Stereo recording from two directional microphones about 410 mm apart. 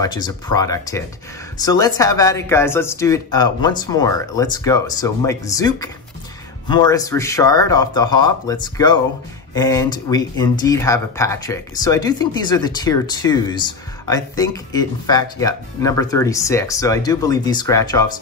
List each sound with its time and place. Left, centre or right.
0.0 s speech: centre